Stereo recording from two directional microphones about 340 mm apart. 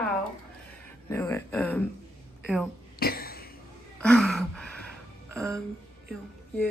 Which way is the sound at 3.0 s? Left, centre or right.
Left.